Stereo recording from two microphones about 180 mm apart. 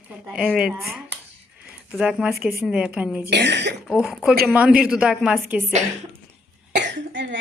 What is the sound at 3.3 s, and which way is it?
Speech, 70° right (ahead or behind).